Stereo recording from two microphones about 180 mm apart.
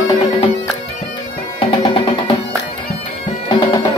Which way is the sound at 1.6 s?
30° left (ahead or behind).